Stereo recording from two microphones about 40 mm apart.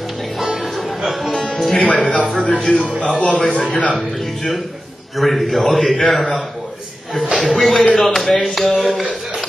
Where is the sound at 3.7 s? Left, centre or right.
Left.